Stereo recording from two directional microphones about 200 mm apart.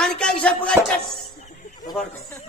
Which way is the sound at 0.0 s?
5° left (ahead or behind).